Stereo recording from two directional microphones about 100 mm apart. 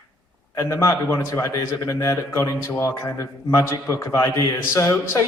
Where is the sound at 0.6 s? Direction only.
30° left (ahead or behind).